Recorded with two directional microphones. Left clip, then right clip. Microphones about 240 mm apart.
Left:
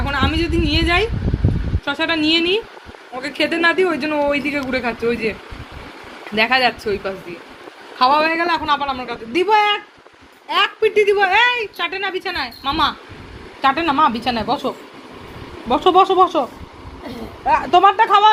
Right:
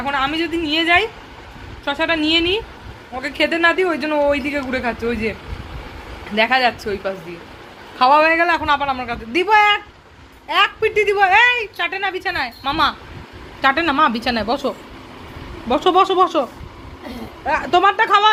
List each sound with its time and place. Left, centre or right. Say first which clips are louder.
0.0 s a woman's voice: even; centre
6.3 s a woman's voice: even; centre